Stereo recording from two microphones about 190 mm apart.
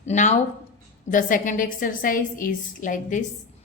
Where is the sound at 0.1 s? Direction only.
40° left (ahead or behind).